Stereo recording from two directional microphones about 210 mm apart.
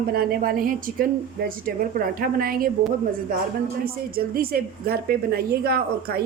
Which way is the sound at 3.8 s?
45° right (ahead or behind).